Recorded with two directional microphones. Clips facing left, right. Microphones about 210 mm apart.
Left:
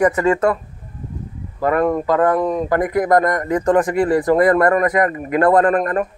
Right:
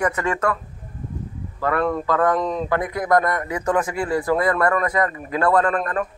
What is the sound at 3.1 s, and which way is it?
A man's voice, 40° left (ahead or behind).